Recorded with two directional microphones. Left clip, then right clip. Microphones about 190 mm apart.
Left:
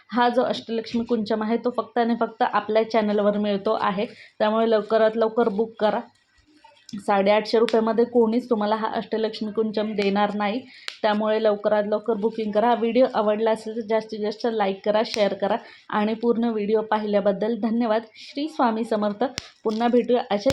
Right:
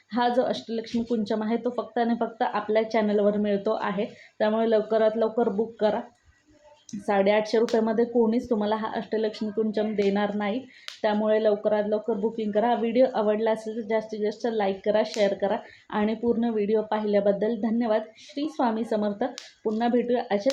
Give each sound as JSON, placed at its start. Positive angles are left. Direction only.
{"t": 0.1, "sound": "speech", "side_deg": 20}
{"t": 7.0, "sound": "speech", "side_deg": 20}
{"t": 19.4, "sound": "speech", "side_deg": 60}
{"t": 19.8, "sound": "speech", "side_deg": 20}